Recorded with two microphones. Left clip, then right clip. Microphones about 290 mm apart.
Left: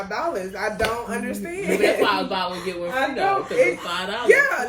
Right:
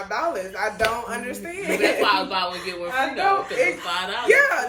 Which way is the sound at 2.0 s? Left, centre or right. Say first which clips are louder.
Right 1 dB; centre.